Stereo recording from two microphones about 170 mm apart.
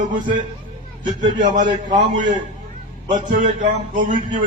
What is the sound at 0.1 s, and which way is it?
A man's voice, 50° right (ahead or behind).